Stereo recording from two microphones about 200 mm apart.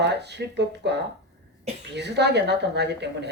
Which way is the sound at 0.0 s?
60° right (ahead or behind).